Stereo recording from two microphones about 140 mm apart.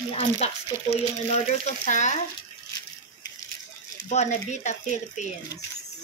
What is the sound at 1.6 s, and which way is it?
Speech, 60° left (ahead or behind).